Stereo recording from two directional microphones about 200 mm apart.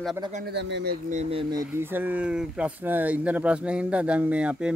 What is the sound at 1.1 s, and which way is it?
Speech, 30° right (ahead or behind).